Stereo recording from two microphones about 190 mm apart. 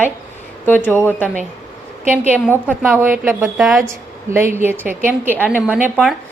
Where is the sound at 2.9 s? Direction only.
10° right (ahead or behind).